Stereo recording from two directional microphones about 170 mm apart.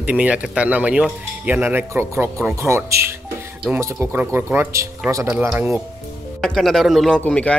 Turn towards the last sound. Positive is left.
turn(degrees=5)  # may be behind; listen again after turning